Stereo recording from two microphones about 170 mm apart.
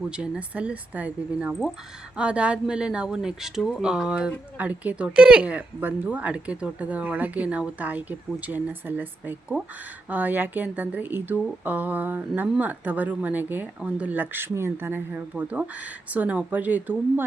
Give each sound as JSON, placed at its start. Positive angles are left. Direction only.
{"t": 0.2, "sound": "speech", "side_deg": -10}